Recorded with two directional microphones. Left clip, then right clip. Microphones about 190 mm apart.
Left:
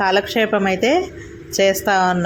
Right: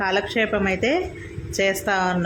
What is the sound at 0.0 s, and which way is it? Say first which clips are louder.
Speech: left 5 dB; 15° left (ahead or behind).